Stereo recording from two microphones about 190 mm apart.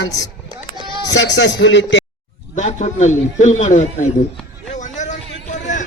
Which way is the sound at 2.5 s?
40° left (ahead or behind).